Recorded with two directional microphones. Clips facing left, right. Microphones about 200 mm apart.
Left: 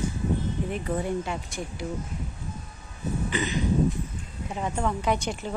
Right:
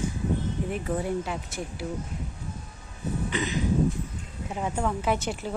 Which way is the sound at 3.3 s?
Centre (ahead or behind).